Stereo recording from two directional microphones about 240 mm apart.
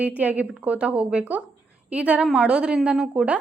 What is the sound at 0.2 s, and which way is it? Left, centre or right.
Speech, centre.